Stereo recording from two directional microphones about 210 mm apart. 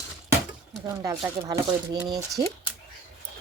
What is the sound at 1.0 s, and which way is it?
Speech, 20° right (ahead or behind).